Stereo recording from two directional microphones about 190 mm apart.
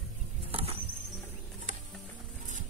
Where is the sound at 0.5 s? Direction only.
30° right (ahead or behind).